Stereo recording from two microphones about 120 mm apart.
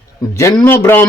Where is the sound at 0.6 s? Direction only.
20° left (ahead or behind).